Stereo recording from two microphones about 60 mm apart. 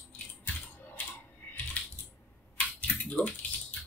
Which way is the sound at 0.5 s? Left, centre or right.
Left.